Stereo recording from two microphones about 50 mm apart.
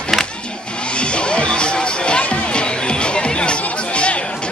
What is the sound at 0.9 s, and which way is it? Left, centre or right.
Music, left.